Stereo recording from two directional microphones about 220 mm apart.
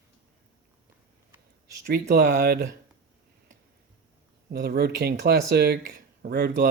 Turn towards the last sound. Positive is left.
turn(degrees=-45)  # may be behind; listen again after turning